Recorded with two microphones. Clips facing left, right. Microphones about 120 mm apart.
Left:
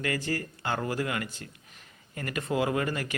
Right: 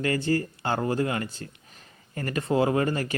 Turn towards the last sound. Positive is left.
turn(degrees=-35)  # may be behind; listen again after turning